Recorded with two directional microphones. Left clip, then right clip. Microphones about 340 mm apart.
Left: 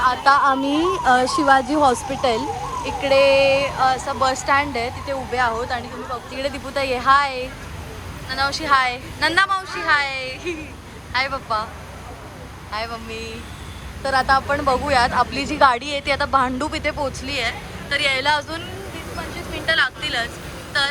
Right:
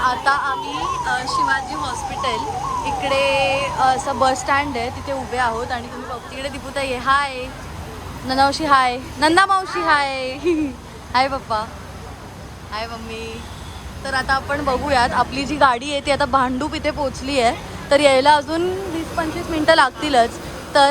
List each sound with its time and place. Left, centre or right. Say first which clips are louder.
0.0 s a woman's voice: left 3 dB; centre
12.7 s speech: even; centre
19.2 s speech: right 8 dB; right